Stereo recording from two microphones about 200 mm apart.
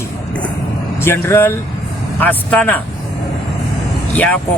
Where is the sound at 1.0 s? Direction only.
10° left (ahead or behind).